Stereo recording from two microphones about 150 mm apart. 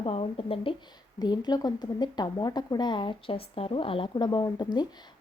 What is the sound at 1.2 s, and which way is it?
Speech, 30° left (ahead or behind).